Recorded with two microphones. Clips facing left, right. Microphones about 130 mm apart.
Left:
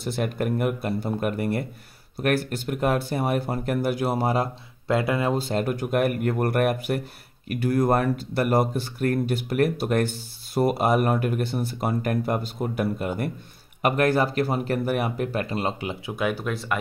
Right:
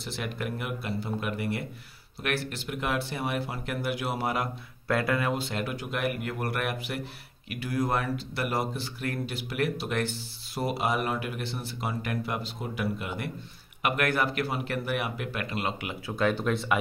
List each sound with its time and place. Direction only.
0.0 s speech: 45° left (ahead or behind); by 5.3 s 20° left (ahead or behind)
5.3 s speech: 40° left (ahead or behind)
16.1 s speech: 10° left (ahead or behind)